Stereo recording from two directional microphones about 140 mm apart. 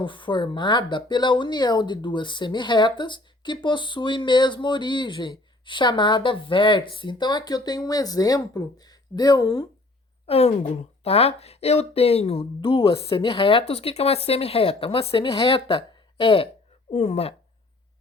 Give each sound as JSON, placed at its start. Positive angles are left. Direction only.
{"t": 0.0, "sound": "speech", "side_deg": 35}
{"t": 10.2, "sound": "speech", "side_deg": 50}